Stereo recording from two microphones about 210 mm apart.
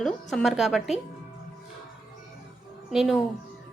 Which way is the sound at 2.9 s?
Centre (ahead or behind).